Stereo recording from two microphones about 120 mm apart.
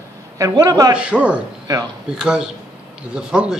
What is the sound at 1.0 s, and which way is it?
Speech, 10° right (ahead or behind).